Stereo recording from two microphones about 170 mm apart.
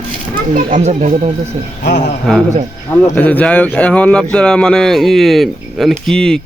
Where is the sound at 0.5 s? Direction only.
45° right (ahead or behind).